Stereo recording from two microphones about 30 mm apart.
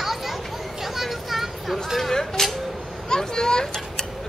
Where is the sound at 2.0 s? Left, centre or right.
Centre.